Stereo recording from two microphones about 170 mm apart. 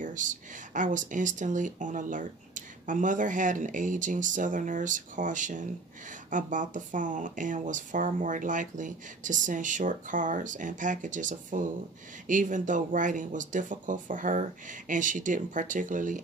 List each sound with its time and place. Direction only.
0.0 s speech: 50° right (ahead or behind)